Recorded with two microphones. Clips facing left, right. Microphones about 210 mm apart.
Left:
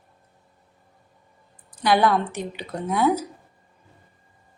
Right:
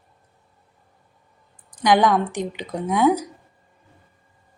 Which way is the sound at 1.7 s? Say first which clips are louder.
Right 2 dB; 15° right (ahead or behind).